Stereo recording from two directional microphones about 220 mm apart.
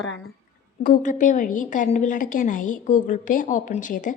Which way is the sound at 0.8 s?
35° left (ahead or behind).